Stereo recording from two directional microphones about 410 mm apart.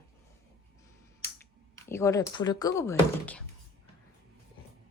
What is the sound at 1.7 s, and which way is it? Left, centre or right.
Speech, centre.